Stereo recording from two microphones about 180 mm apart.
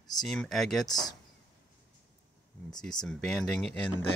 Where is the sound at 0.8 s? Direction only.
20° left (ahead or behind).